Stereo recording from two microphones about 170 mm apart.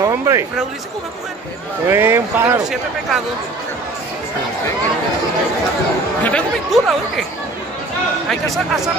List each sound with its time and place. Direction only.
0.0 s speech: 15° right (ahead or behind)
1.9 s speech: 15° right (ahead or behind)
6.2 s speech: 5° left (ahead or behind)
8.3 s speech: centre (ahead or behind)